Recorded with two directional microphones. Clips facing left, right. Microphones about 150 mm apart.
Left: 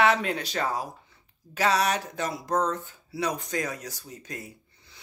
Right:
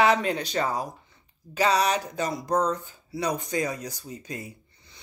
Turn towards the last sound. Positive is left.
turn(degrees=0)  # may be behind; listen again after turning